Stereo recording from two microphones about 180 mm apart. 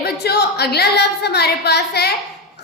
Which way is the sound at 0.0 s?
65° left (ahead or behind).